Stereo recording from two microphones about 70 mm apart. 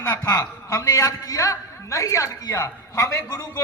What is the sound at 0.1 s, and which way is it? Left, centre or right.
A man's voice, left.